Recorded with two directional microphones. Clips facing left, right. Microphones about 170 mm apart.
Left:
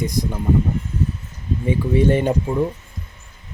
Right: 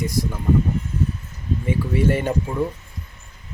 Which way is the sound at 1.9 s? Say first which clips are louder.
Left 4 dB; 20° left (ahead or behind).